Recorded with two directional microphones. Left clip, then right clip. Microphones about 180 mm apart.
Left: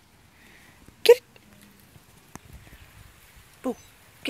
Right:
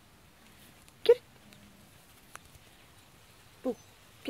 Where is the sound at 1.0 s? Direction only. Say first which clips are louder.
Left 7 dB; 20° left (ahead or behind).